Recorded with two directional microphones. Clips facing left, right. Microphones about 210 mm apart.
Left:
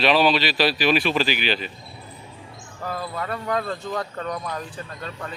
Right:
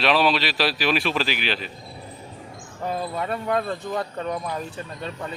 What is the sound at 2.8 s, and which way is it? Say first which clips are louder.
Speech: right 2 dB; 20° right (ahead or behind).